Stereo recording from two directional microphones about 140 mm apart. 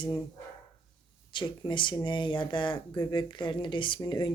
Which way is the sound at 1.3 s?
30° left (ahead or behind).